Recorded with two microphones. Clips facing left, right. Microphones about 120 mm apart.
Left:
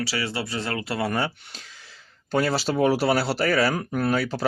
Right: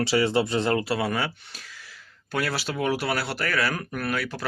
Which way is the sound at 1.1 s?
15° left (ahead or behind).